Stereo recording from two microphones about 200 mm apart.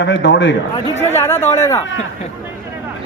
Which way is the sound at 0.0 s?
65° left (ahead or behind).